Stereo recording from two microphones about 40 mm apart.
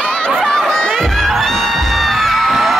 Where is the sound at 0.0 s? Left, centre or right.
Left.